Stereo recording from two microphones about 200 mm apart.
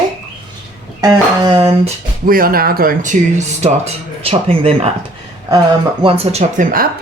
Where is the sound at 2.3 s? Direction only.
45° right (ahead or behind).